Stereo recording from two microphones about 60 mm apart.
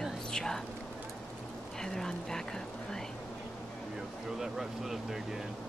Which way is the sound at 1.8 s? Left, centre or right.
Centre.